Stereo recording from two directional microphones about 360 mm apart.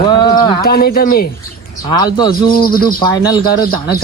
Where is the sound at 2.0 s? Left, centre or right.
Centre.